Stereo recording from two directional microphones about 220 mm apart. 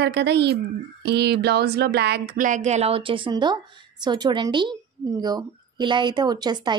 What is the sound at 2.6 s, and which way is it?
Speech, 30° right (ahead or behind).